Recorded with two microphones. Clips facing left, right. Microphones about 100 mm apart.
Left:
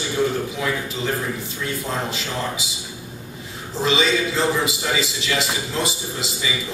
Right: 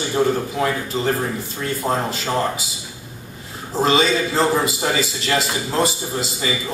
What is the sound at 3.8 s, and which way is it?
A man's voice, 45° right (ahead or behind).